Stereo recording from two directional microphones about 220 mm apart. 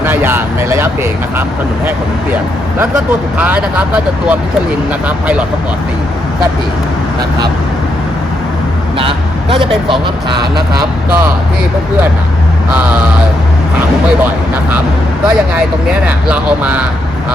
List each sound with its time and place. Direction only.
0.0 s speech: 10° right (ahead or behind)
3.3 s speech: 5° right (ahead or behind)
9.0 s speech: 25° right (ahead or behind)
16.0 s speech: 5° right (ahead or behind)